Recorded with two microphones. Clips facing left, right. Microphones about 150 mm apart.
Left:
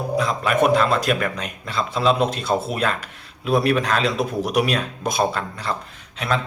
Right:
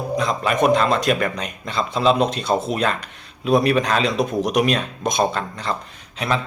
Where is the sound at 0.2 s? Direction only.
5° left (ahead or behind).